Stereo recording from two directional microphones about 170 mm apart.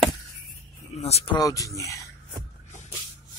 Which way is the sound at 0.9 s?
35° left (ahead or behind).